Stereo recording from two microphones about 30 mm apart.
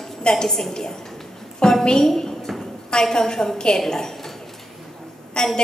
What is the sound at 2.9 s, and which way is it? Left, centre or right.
Speech, left.